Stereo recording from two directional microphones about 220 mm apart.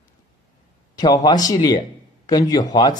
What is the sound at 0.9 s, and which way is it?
A man's voice, 20° left (ahead or behind).